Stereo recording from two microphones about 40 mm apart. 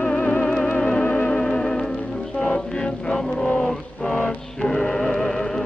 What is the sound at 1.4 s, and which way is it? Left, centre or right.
Music, centre.